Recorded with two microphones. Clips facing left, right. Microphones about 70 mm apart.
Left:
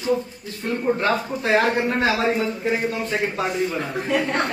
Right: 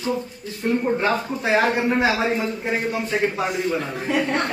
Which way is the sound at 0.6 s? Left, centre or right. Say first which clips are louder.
Right 1 dB; centre.